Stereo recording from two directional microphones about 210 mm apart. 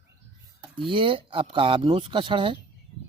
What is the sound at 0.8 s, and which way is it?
Speech, 25° right (ahead or behind).